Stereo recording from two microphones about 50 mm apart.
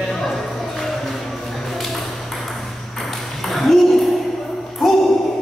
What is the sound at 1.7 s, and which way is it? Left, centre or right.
Ping, centre.